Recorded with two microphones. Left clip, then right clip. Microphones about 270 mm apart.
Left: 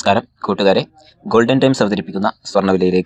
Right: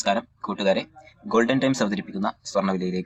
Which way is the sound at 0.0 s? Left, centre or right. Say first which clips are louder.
Left 9 dB; left.